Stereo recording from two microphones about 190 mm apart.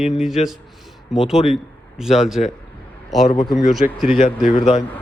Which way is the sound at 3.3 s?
25° left (ahead or behind).